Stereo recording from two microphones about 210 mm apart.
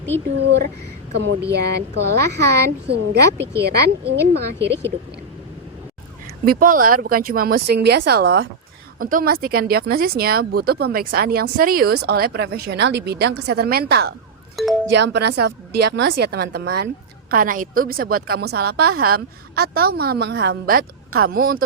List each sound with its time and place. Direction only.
0.3 s speech: 55° right (ahead or behind)
2.3 s speech: 55° right (ahead or behind)
6.4 s speech: 45° right (ahead or behind)
14.5 s speech: centre (ahead or behind)
14.8 s speech: 55° right (ahead or behind)